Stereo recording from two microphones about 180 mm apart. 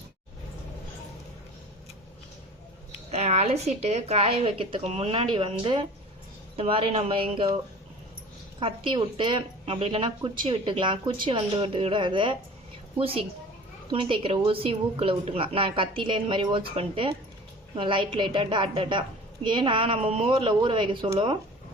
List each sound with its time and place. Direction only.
3.1 s a woman's voice: 35° right (ahead or behind)